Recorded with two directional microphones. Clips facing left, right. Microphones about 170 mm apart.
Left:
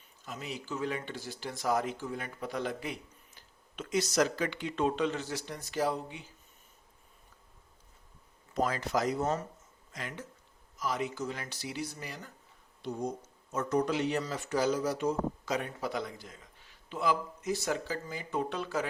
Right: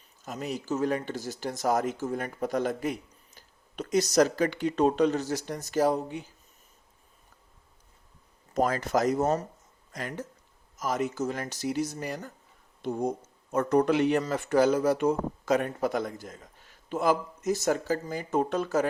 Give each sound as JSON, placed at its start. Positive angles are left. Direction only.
{"t": 0.3, "sound": "speech", "side_deg": -45}
{"t": 8.5, "sound": "speech", "side_deg": -45}